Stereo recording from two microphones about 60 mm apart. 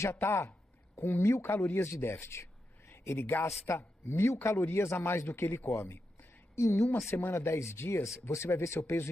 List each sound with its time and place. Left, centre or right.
0.1 s speech: left
3.2 s speech: left
3.6 s speech: left
7.1 s speech: left
7.3 s speech: left